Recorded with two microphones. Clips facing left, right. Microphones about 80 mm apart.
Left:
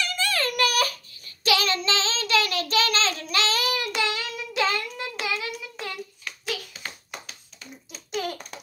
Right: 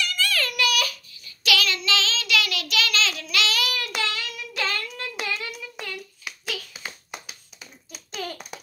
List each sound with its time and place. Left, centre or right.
0.0 s baby cry: left
0.5 s child singing: left
3.8 s child singing: left
6.3 s hands: centre